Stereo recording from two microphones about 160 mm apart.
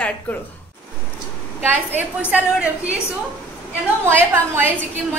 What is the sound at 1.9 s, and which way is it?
A woman's voice, 10° right (ahead or behind).